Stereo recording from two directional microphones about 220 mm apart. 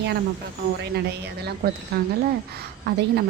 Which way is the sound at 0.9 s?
50° right (ahead or behind).